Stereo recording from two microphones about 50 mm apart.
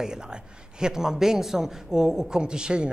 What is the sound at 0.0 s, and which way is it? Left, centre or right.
A man's voice, centre.